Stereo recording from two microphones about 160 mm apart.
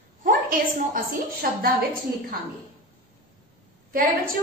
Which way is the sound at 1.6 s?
65° right (ahead or behind).